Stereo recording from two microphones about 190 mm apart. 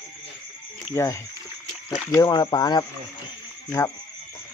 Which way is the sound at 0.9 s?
15° left (ahead or behind).